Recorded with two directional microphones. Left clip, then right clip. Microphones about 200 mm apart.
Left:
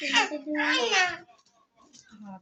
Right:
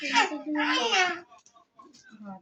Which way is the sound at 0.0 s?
20° left (ahead or behind).